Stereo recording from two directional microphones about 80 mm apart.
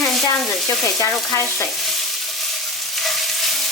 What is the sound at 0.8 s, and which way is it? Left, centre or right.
Stir, left.